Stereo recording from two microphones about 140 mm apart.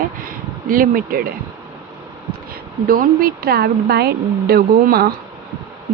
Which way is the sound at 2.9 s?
90° right.